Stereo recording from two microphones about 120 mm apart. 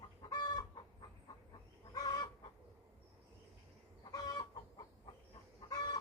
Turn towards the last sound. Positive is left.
turn(degrees=30)  # may be behind; listen again after turning